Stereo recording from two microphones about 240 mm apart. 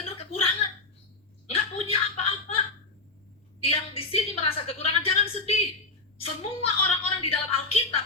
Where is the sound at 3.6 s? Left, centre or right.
Left.